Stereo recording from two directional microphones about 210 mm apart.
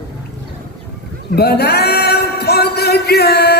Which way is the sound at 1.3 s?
50° left (ahead or behind).